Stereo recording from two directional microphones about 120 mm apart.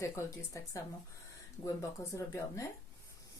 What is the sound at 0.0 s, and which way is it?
Speech, 25° left (ahead or behind).